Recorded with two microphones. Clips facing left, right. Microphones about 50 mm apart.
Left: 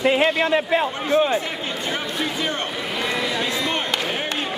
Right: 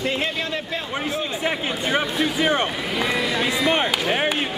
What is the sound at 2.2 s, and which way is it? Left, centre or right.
Speech, right.